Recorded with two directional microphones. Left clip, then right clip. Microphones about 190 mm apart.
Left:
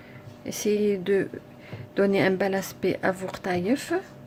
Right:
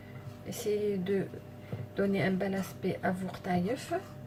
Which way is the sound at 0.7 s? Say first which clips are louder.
Left 7 dB; 50° left (ahead or behind).